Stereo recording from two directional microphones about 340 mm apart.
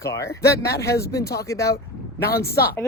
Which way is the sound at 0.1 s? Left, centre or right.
Centre.